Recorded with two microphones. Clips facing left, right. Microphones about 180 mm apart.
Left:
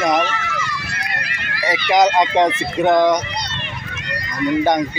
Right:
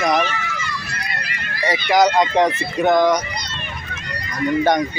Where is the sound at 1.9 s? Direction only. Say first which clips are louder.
Left 1 dB; 20° left (ahead or behind).